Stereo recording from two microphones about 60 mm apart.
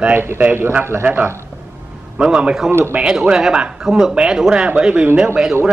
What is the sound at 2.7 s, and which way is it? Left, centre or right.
Speech, right.